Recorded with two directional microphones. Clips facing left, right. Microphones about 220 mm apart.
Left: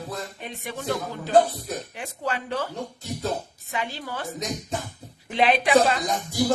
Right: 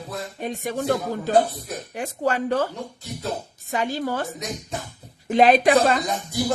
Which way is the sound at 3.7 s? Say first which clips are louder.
Right 7 dB; 45° right (ahead or behind).